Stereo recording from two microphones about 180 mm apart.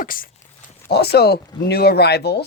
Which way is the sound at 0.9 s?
65° left (ahead or behind).